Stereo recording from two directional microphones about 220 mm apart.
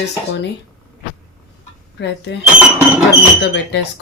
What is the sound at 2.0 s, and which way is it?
Speech, 50° left (ahead or behind).